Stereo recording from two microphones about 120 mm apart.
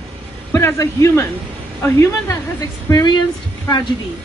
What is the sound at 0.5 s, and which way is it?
Speech, 25° left (ahead or behind).